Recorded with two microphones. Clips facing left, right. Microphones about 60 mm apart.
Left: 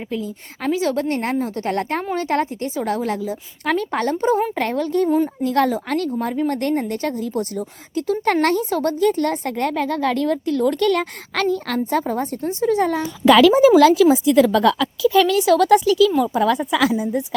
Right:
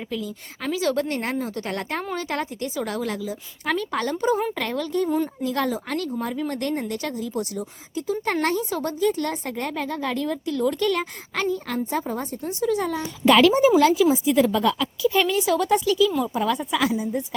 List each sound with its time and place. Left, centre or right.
0.1 s a woman's voice: left
5.0 s a woman's voice: centre
5.4 s a woman's voice: left
12.4 s speech: left
13.2 s a woman's voice: left